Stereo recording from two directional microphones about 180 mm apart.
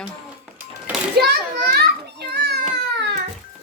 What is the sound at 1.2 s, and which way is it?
Children playing, 60° right (ahead or behind).